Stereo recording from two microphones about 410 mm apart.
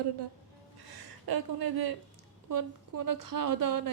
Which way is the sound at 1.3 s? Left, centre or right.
Right.